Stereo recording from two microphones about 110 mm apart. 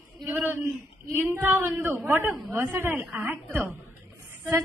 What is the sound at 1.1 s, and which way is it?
Female singing, 20° right (ahead or behind).